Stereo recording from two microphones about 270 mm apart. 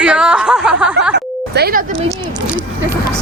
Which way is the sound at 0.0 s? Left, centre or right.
Centre.